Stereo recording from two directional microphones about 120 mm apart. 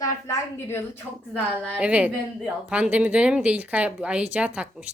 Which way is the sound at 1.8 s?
10° right (ahead or behind).